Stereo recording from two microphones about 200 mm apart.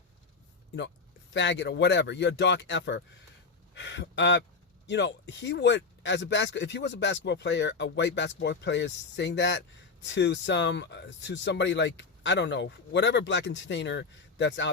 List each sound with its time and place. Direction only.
1.3 s speech: 60° left (ahead or behind)